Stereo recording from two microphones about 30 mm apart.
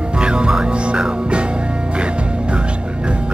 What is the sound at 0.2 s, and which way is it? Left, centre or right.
Music, right.